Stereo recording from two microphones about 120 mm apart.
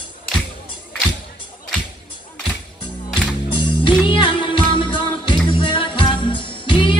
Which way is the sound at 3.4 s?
45° left (ahead or behind).